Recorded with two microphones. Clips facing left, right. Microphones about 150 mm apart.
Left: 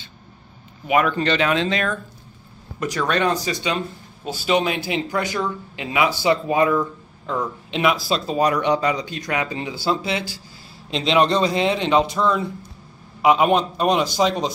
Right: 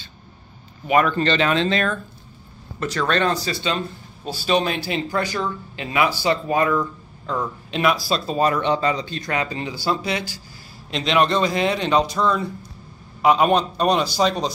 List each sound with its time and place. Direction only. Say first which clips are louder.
0.8 s speech: right 1 dB; 10° left (ahead or behind)
13.2 s speech: even; 15° left (ahead or behind)